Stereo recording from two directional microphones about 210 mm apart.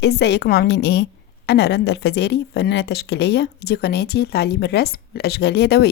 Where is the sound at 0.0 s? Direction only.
55° left (ahead or behind).